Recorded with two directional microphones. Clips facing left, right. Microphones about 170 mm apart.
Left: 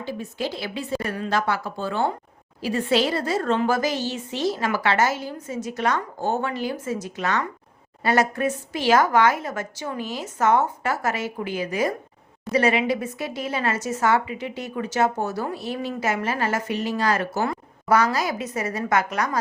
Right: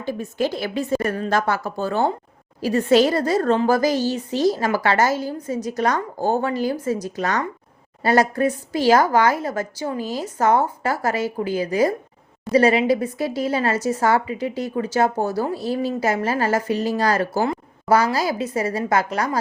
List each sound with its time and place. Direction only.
0.0 s a woman's voice: 50° right (ahead or behind); by 19.4 s 30° right (ahead or behind)